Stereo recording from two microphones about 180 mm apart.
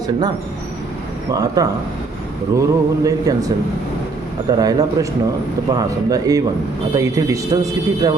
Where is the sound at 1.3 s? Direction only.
20° right (ahead or behind).